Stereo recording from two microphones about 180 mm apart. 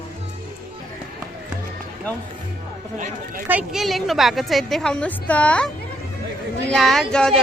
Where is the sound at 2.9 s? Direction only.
45° right (ahead or behind).